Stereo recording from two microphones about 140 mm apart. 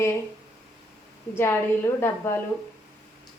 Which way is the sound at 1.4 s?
20° left (ahead or behind).